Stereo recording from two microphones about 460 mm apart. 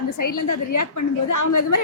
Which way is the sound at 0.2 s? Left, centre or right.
Left.